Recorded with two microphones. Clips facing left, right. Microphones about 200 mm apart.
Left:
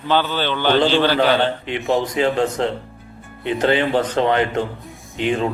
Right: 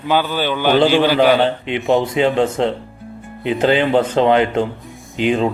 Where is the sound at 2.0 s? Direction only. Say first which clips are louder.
Right 3 dB; 30° right (ahead or behind).